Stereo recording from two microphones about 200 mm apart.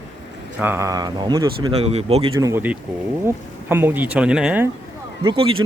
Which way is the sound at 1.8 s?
30° right (ahead or behind).